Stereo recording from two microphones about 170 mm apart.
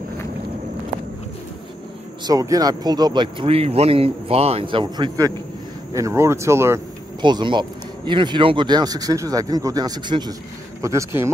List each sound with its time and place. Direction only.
2.2 s speech: 20° right (ahead or behind)
7.2 s speech: 25° right (ahead or behind)